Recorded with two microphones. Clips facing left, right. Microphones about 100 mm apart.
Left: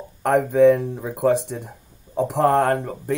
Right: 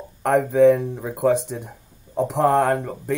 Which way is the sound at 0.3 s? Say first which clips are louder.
Even; 60° left (ahead or behind).